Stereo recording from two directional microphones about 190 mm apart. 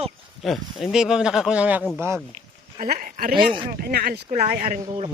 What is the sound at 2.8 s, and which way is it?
Speech, 45° right (ahead or behind).